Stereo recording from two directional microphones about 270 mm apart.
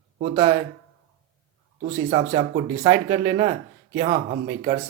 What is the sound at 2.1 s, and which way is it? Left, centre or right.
Speech, right.